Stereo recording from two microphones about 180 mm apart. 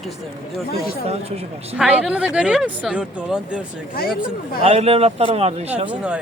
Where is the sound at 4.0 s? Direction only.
55° left (ahead or behind).